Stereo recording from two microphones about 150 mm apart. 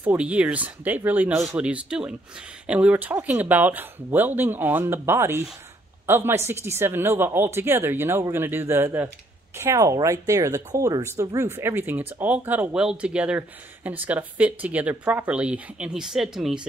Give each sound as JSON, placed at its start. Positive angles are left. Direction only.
{"t": 0.0, "sound": "speech", "side_deg": -10}